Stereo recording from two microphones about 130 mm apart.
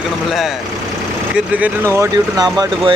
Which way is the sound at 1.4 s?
10° right (ahead or behind).